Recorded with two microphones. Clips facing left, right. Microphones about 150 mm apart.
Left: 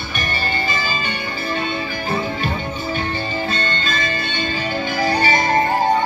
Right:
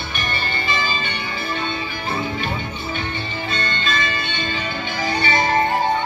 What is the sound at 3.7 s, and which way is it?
Music, 40° left (ahead or behind).